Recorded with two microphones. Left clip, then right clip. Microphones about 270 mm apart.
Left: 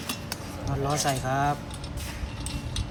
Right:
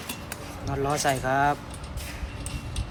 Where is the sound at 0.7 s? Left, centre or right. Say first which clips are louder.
Right 2 dB; centre.